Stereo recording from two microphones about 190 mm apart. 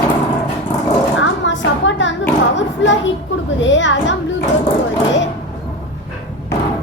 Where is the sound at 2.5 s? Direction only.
75° left (ahead or behind).